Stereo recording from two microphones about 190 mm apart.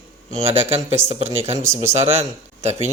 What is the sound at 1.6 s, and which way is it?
Speech, 15° right (ahead or behind).